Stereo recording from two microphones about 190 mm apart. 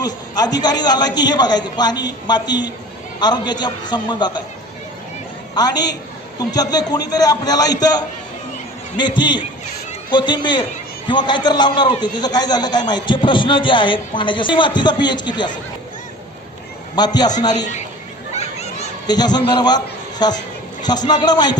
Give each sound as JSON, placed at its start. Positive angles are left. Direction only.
{"t": 0.0, "sound": "a man's voice", "side_deg": 20}
{"t": 5.5, "sound": "a man's voice", "side_deg": 20}
{"t": 16.9, "sound": "a man's voice", "side_deg": 20}
{"t": 18.3, "sound": "a sound", "side_deg": 35}
{"t": 19.0, "sound": "a man's voice", "side_deg": 20}